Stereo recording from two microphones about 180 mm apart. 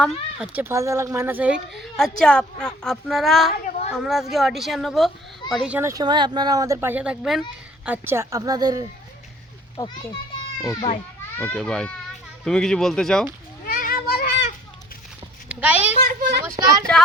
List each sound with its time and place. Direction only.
0.0 s a woman's voice: 5° right (ahead or behind)
3.6 s a sound: 45° left (ahead or behind)
3.9 s a woman's voice: centre (ahead or behind)
7.9 s a woman's voice: 15° right (ahead or behind)
9.7 s a child's voice: 25° left (ahead or behind)
11.3 s a woman's voice: 5° left (ahead or behind)
13.7 s children playing: 50° left (ahead or behind)
15.4 s a child's voice: 10° right (ahead or behind)
16.0 s a child's voice: 55° right (ahead or behind)
16.6 s a woman's voice: 20° right (ahead or behind)